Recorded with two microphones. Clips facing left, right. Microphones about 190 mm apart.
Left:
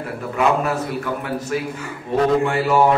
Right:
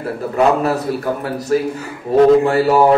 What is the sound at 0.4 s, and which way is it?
Speech, 35° right (ahead or behind).